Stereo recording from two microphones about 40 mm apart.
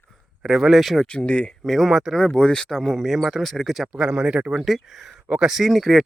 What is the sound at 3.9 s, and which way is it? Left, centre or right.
Speech, right.